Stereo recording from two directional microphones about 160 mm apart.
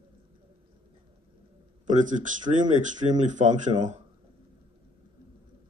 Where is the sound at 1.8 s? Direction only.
50° right (ahead or behind).